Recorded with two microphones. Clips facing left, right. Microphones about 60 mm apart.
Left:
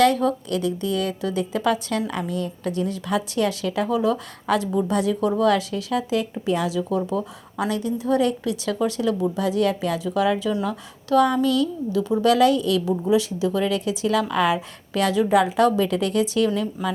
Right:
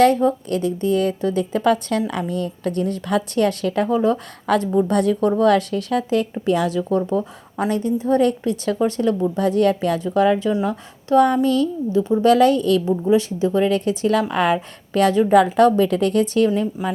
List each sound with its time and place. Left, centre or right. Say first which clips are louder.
0.0 s a woman's voice: right 3 dB; right
4.9 s a woman's voice: right 2 dB; right
12.2 s a woman's voice: right 3 dB; right